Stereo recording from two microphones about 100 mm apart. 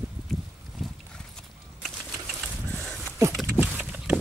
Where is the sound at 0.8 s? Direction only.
Centre (ahead or behind).